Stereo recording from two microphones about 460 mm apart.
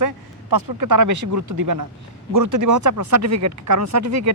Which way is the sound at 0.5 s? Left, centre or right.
Right.